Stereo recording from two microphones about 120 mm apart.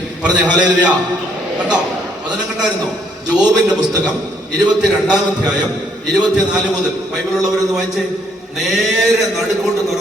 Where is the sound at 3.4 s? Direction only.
35° right (ahead or behind).